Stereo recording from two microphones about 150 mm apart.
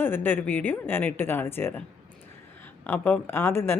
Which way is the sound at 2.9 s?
10° left (ahead or behind).